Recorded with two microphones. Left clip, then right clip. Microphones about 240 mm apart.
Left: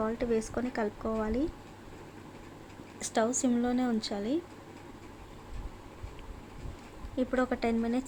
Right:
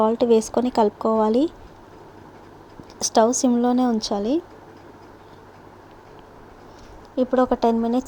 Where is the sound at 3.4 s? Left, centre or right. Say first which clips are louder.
Right 10 dB; centre.